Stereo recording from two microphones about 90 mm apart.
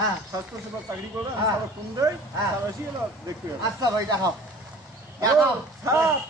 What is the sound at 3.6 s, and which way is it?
Speech, 40° right (ahead or behind).